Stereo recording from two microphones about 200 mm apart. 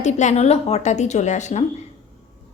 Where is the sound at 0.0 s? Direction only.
35° left (ahead or behind).